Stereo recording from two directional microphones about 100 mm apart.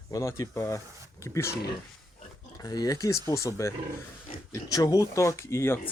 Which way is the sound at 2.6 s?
40° left (ahead or behind).